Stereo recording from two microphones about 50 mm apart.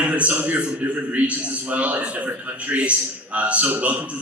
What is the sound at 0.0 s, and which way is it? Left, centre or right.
A man's voice, right.